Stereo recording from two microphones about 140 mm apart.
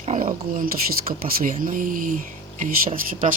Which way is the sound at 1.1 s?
80° right.